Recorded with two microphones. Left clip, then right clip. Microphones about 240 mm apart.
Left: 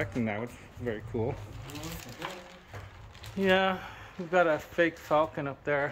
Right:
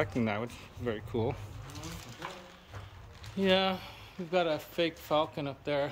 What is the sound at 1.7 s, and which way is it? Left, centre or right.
Sewing machine, left.